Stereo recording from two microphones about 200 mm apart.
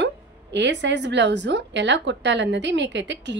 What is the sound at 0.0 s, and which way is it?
A woman's voice, 60° right (ahead or behind).